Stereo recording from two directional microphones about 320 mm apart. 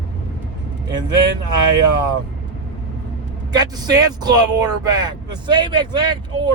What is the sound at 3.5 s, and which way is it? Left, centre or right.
Speech, centre.